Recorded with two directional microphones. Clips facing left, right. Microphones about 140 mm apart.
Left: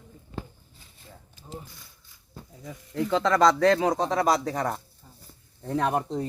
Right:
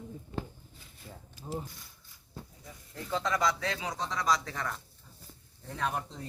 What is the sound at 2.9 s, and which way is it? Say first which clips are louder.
Speech: left 9 dB; 90° left.